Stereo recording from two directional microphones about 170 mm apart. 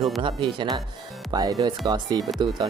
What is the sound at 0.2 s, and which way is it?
Speech, 30° right (ahead or behind).